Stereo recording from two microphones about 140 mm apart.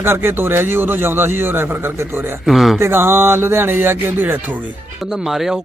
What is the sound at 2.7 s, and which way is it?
Speech, 15° right (ahead or behind).